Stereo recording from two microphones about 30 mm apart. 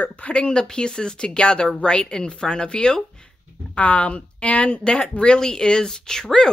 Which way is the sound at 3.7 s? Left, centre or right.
Left.